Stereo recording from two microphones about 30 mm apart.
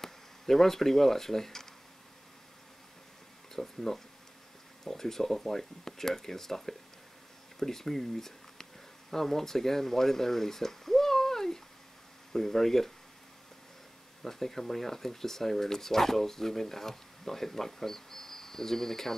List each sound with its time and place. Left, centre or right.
0.0 s speech: centre
3.5 s speech: centre
14.2 s speech: centre